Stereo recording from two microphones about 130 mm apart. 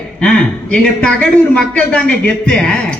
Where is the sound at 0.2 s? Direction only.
10° left (ahead or behind).